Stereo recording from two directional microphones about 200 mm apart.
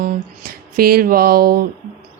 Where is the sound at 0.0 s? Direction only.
45° right (ahead or behind).